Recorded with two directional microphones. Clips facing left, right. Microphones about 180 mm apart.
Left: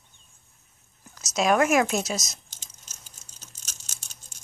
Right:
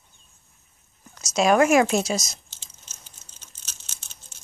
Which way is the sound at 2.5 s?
45° left (ahead or behind).